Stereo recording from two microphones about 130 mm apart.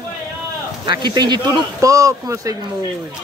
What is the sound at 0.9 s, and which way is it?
A man's voice, 35° right (ahead or behind).